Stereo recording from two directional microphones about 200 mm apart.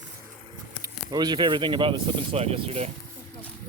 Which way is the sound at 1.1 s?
20° right (ahead or behind).